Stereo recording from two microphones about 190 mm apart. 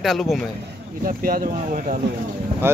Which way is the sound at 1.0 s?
50° right (ahead or behind).